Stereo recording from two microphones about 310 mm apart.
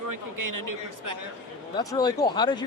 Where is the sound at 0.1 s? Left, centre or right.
Right.